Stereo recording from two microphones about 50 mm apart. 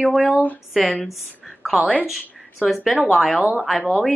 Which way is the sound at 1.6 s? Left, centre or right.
Centre.